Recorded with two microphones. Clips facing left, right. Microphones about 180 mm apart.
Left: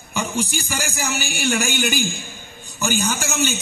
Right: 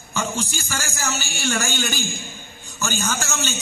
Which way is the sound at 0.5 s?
15° left (ahead or behind).